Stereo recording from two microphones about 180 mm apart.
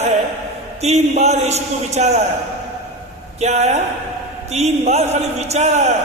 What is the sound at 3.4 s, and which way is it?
A man's voice, 40° right (ahead or behind).